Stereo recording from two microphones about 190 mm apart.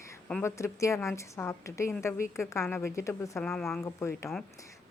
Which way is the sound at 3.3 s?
Centre (ahead or behind).